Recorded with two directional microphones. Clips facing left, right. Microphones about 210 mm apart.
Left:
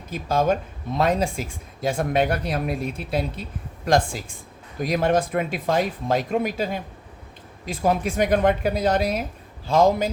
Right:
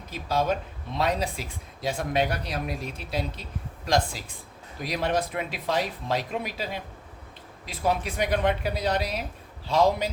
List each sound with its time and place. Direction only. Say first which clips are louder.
0.1 s speech: left 5 dB; 50° left (ahead or behind)